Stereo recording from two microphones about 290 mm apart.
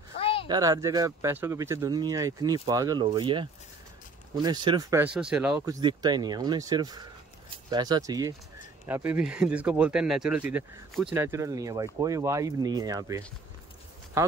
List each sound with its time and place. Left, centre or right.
0.2 s a sound: centre
0.5 s speech: centre
5.5 s speech: centre